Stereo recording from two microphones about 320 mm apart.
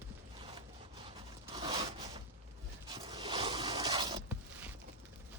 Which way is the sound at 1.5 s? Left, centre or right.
Centre.